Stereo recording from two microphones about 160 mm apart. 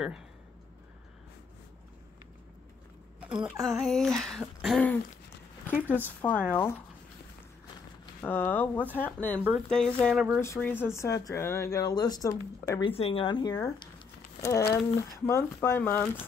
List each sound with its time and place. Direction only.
3.2 s speech: 5° right (ahead or behind)
5.7 s speech: 10° right (ahead or behind)
6.2 s speech: 10° left (ahead or behind)
8.2 s speech: 10° left (ahead or behind)
12.8 s speech: 35° left (ahead or behind); by 16.1 s 10° left (ahead or behind)